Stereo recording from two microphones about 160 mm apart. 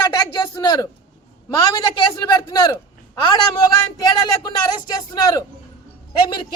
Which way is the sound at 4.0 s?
25° left (ahead or behind).